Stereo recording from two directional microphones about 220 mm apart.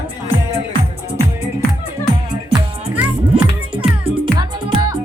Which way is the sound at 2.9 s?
5° right (ahead or behind).